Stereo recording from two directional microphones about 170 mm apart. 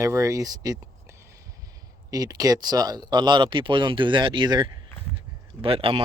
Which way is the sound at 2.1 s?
20° right (ahead or behind).